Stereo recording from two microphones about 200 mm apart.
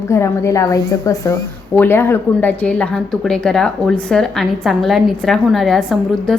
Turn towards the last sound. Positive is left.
turn(degrees=0)  # may be behind; listen again after turning